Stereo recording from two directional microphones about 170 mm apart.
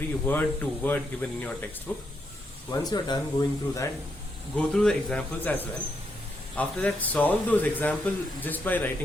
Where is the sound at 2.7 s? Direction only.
25° left (ahead or behind).